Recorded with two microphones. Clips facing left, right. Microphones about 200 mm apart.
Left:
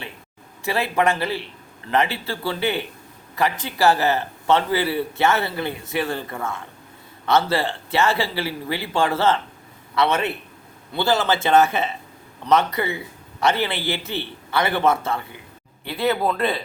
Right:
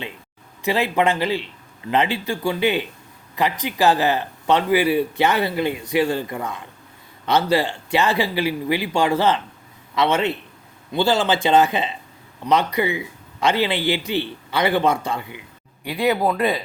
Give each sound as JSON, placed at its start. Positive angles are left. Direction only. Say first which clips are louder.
{"t": 0.6, "sound": "a man's voice", "louder": "right 2 dB", "side_deg": -15}